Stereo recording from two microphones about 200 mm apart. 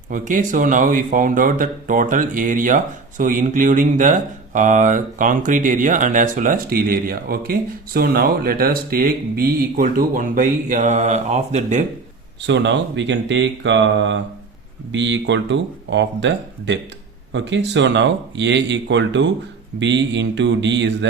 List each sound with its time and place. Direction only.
0.1 s speech: 40° right (ahead or behind)
12.5 s speech: 65° right (ahead or behind)